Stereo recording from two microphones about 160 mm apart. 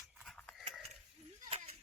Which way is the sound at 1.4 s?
40° right (ahead or behind).